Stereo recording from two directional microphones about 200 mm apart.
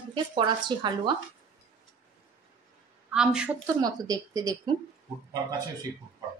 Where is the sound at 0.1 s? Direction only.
25° right (ahead or behind).